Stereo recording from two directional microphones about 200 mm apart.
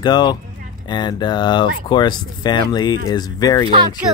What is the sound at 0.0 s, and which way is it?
Speech, 20° left (ahead or behind).